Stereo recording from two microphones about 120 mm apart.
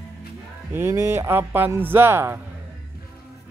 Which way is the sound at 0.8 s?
20° right (ahead or behind).